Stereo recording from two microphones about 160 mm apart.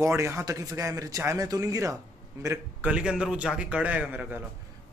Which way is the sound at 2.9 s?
5° right (ahead or behind).